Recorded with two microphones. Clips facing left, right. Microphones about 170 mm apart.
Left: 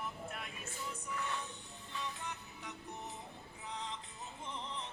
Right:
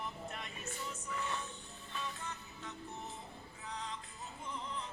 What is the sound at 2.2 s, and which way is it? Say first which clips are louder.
Music: even; 15° left (ahead or behind).